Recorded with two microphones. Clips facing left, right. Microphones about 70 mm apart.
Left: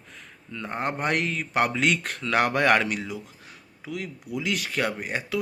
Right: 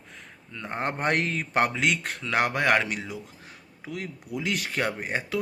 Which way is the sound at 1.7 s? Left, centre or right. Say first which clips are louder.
Left 2 dB; centre.